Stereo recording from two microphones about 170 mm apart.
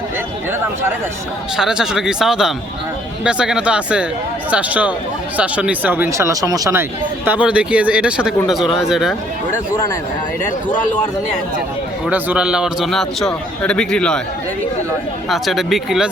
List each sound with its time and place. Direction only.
1.5 s a man's voice: centre (ahead or behind)
7.3 s a man's voice: 5° right (ahead or behind)
9.7 s speech: 20° left (ahead or behind)
12.0 s a man's voice: 5° right (ahead or behind)
15.3 s a man's voice: centre (ahead or behind)